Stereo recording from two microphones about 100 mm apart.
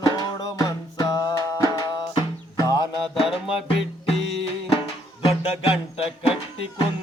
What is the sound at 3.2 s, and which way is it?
Music, 5° right (ahead or behind).